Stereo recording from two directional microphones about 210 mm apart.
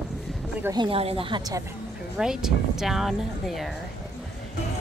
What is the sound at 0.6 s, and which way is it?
Speech, 20° right (ahead or behind).